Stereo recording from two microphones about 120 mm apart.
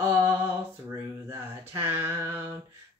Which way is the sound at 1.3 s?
20° right (ahead or behind).